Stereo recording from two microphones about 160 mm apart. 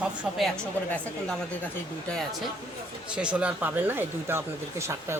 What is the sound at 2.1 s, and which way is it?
Speech, 5° left (ahead or behind).